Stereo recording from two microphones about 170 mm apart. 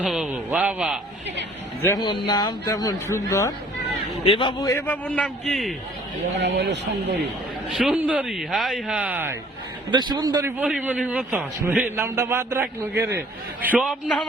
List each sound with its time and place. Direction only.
0.0 s speech: 5° right (ahead or behind)
1.8 s speech: 20° left (ahead or behind)
4.3 s a man's voice: 30° left (ahead or behind); by 5.7 s 5° left (ahead or behind)
6.4 s speech: 90° right
7.7 s speech: 5° right (ahead or behind)
9.9 s a man's voice: 25° right (ahead or behind)
10.6 s a man's voice: 10° right (ahead or behind)